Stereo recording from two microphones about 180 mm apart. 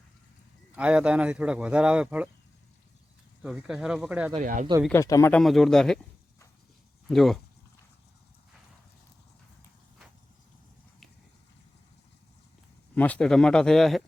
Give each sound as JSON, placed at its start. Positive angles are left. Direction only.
{"t": 0.8, "sound": "speech", "side_deg": -5}
{"t": 3.4, "sound": "speech", "side_deg": -5}
{"t": 4.4, "sound": "speech", "side_deg": -45}
{"t": 4.9, "sound": "speech", "side_deg": 15}
{"t": 5.3, "sound": "speech", "side_deg": 0}
{"t": 7.1, "sound": "speech", "side_deg": 0}
{"t": 12.9, "sound": "speech", "side_deg": 10}